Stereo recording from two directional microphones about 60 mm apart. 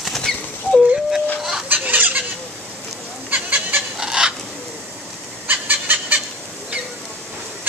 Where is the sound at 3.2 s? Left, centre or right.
Right.